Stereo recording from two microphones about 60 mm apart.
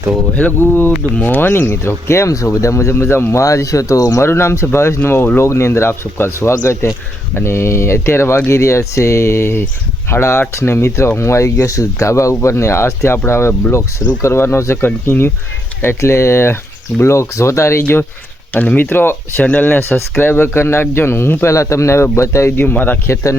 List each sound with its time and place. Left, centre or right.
0.6 s speech: left
2.9 s speech: left
3.3 s speech: left
4.2 s speech: left
16.0 s speech: left
18.5 s speech: left
22.5 s speech: left
23.0 s speech: left